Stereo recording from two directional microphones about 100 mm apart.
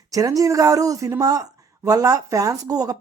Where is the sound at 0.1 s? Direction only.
35° right (ahead or behind).